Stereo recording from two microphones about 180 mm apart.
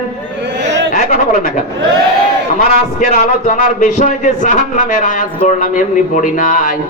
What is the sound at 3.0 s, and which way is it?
A man's voice, 45° left (ahead or behind).